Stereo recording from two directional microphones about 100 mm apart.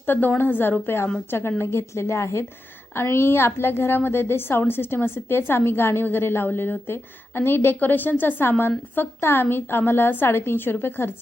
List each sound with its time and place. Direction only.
0.0 s a woman's voice: 20° left (ahead or behind)